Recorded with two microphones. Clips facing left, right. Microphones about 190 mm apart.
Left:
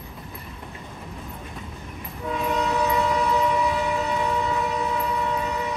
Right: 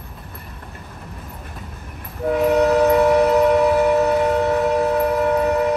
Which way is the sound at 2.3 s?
65° right (ahead or behind).